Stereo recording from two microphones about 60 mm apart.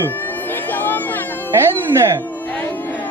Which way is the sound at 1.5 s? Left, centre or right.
Right.